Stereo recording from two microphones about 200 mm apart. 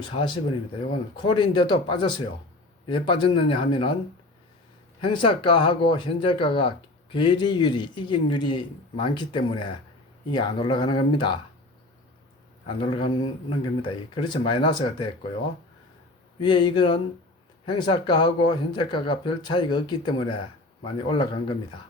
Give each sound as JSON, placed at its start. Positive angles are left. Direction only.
{"t": 0.0, "sound": "speech", "side_deg": 25}
{"t": 4.9, "sound": "speech", "side_deg": 25}
{"t": 12.6, "sound": "speech", "side_deg": 25}
{"t": 16.4, "sound": "speech", "side_deg": 20}